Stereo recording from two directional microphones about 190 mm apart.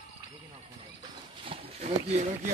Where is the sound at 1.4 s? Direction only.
35° right (ahead or behind).